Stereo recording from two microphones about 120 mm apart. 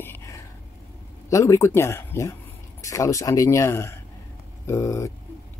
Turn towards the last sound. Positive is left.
turn(degrees=25)  # may be behind; listen again after turning